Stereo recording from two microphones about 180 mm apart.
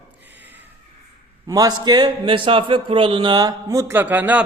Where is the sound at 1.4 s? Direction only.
20° right (ahead or behind).